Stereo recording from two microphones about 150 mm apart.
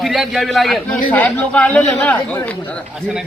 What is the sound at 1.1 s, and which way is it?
Speech, 10° left (ahead or behind).